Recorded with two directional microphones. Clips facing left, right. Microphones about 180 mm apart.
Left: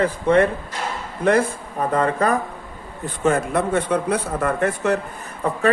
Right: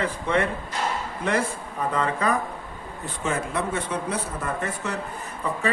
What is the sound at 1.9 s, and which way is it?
Speech, 50° left (ahead or behind).